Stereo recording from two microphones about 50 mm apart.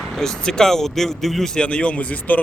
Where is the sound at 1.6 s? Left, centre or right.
Left.